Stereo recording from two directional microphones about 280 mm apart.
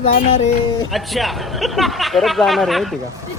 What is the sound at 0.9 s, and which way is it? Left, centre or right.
A man's voice, centre.